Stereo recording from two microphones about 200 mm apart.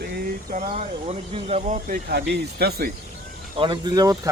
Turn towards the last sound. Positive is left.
turn(degrees=-20)  # may be behind; listen again after turning